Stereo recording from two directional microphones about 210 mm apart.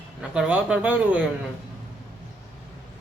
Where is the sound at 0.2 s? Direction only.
5° right (ahead or behind).